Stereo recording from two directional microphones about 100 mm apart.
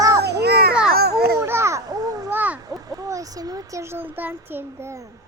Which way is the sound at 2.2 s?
20° right (ahead or behind).